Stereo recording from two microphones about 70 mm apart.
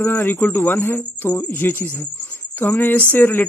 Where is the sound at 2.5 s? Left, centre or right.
Left.